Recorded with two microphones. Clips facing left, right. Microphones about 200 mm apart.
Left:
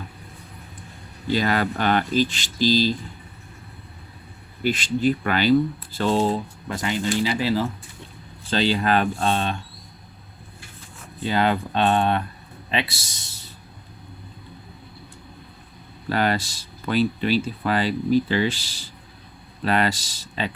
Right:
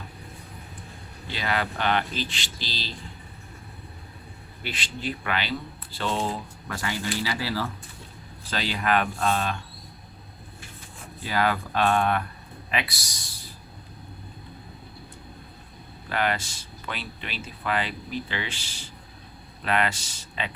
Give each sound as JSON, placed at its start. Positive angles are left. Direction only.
{"t": 1.3, "sound": "speech", "side_deg": 45}
{"t": 4.6, "sound": "speech", "side_deg": 45}
{"t": 6.7, "sound": "speech", "side_deg": 20}
{"t": 11.2, "sound": "speech", "side_deg": 25}
{"t": 16.0, "sound": "speech", "side_deg": 35}